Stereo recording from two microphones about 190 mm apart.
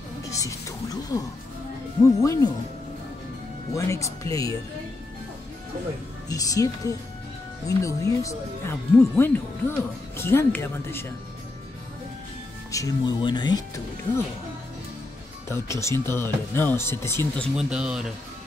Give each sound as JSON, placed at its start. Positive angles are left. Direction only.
{"t": 0.3, "sound": "music", "side_deg": 15}
{"t": 2.0, "sound": "speech", "side_deg": 15}
{"t": 3.7, "sound": "speech", "side_deg": 15}
{"t": 6.2, "sound": "speech", "side_deg": 20}
{"t": 12.7, "sound": "speech", "side_deg": 20}
{"t": 15.4, "sound": "speech", "side_deg": 15}
{"t": 17.6, "sound": "a man's voice", "side_deg": -5}